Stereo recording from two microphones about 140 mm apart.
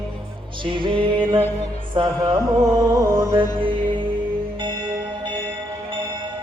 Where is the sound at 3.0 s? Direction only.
20° right (ahead or behind).